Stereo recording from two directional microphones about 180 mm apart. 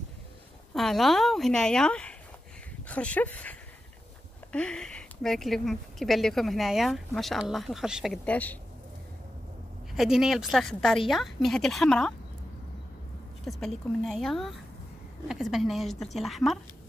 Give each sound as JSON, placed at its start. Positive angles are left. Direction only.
{"t": 0.7, "sound": "speech", "side_deg": 0}
{"t": 9.9, "sound": "speech", "side_deg": 0}
{"t": 13.5, "sound": "speech", "side_deg": 0}